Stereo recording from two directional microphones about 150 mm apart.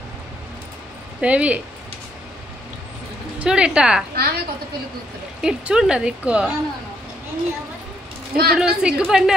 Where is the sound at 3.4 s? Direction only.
5° right (ahead or behind).